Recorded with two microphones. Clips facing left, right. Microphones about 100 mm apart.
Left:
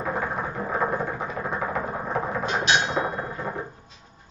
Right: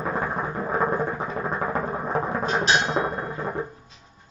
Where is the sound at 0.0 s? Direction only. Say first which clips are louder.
Right 1 dB; 35° right (ahead or behind).